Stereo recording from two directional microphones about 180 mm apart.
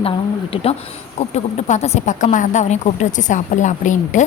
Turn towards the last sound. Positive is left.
turn(degrees=45)  # may be behind; listen again after turning